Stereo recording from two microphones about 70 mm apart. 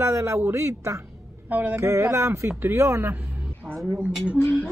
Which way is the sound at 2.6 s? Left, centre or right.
Right.